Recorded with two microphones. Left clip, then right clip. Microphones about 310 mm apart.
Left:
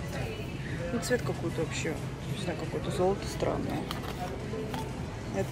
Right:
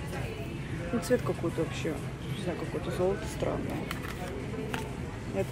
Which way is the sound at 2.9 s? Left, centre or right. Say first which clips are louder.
Left 2 dB; centre.